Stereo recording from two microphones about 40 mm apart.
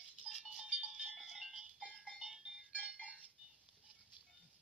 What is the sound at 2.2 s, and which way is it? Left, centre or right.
Music, centre.